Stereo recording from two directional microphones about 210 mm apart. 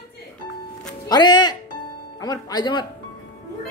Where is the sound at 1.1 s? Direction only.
20° left (ahead or behind).